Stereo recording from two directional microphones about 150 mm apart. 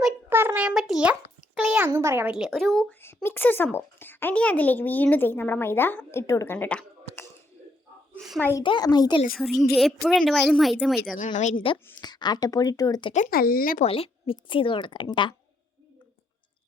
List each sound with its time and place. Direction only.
0.3 s a child's voice: 15° right (ahead or behind)
2.3 s a woman's voice: centre (ahead or behind)
3.2 s speech: 15° left (ahead or behind)
8.4 s speech: 15° left (ahead or behind)
8.6 s speech: 30° left (ahead or behind)
9.3 s a woman's voice: centre (ahead or behind)
11.3 s a woman's voice: 50° left (ahead or behind)
11.9 s speech: 25° left (ahead or behind)
13.3 s speech: 80° left
13.8 s a woman's voice: 40° left (ahead or behind)